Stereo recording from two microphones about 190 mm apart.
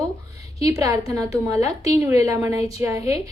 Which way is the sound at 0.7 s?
20° right (ahead or behind).